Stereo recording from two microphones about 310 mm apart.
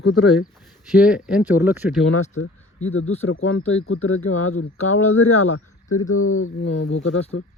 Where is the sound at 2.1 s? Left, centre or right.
Left.